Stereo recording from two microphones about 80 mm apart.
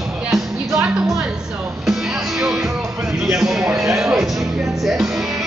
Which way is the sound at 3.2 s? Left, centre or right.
Centre.